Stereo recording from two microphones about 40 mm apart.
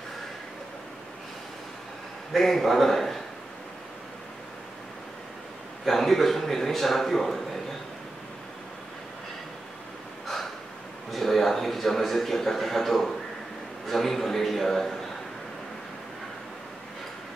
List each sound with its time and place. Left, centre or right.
2.3 s a man's voice: centre
5.9 s a man's voice: centre
11.1 s a man's voice: centre